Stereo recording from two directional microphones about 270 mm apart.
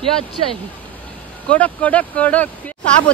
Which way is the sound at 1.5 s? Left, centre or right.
Centre.